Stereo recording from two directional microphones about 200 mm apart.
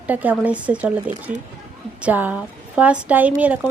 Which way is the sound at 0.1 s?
10° right (ahead or behind).